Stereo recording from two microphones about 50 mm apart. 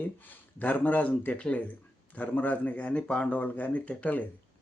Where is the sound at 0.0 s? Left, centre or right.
Left.